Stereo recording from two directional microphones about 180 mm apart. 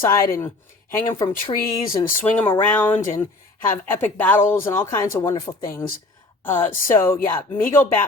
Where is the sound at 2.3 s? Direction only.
10° left (ahead or behind).